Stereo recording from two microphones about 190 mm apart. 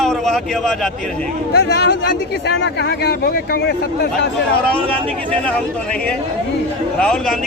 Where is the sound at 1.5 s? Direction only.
60° left (ahead or behind).